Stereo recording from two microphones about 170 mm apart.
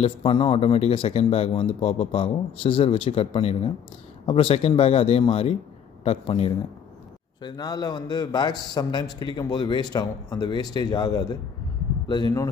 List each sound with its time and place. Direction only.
0.0 s speech: 35° left (ahead or behind)
7.4 s a man's voice: 25° left (ahead or behind)